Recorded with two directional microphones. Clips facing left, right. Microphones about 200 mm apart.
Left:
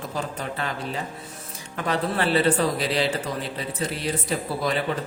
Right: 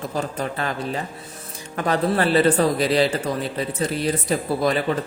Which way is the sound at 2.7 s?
45° right (ahead or behind).